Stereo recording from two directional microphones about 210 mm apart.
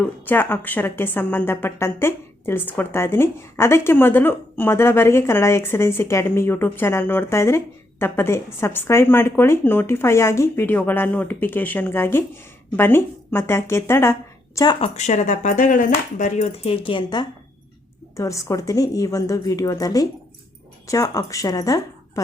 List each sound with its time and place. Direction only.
0.3 s a woman's voice: 10° left (ahead or behind)
14.9 s a woman's voice: 35° left (ahead or behind); by 22.2 s 15° left (ahead or behind)